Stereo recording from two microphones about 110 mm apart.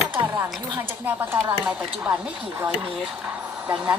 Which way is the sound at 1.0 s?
20° right (ahead or behind).